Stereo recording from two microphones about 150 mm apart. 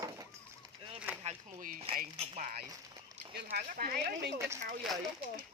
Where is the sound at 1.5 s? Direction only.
65° right (ahead or behind).